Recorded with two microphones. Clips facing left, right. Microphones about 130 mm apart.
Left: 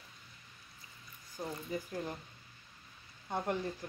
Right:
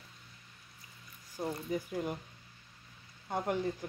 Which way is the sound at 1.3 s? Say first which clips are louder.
Right 4 dB; 10° right (ahead or behind).